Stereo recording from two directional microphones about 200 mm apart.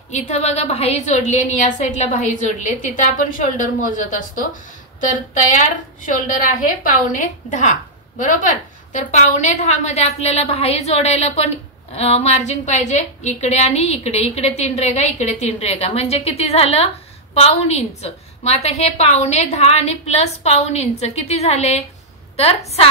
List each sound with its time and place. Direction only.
0.1 s a woman's voice: 35° left (ahead or behind)
5.5 s a woman's voice: 40° left (ahead or behind)